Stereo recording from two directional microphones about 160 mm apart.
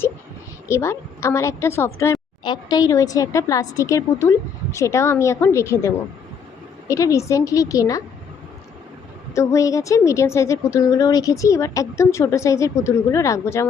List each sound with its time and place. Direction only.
0.7 s a woman's voice: 15° left (ahead or behind)
9.3 s a woman's voice: 20° left (ahead or behind)